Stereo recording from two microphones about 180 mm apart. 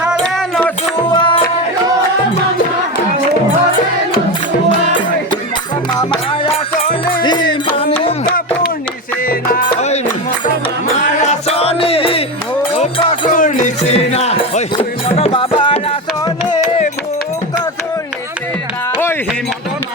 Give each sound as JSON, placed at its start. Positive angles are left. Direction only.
{"t": 0.0, "sound": "music", "side_deg": 0}
{"t": 1.0, "sound": "music", "side_deg": 25}
{"t": 6.0, "sound": "music", "side_deg": 25}
{"t": 9.3, "sound": "music", "side_deg": 55}
{"t": 11.2, "sound": "music", "side_deg": 40}
{"t": 13.3, "sound": "music", "side_deg": 45}